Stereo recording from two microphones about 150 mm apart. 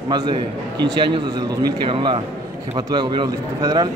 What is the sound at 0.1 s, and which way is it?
A man's voice, 30° right (ahead or behind).